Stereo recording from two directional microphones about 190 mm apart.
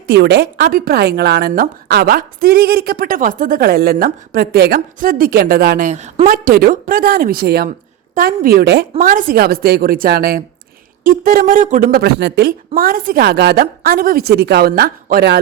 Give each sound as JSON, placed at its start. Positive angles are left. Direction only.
{"t": 0.1, "sound": "speech", "side_deg": -60}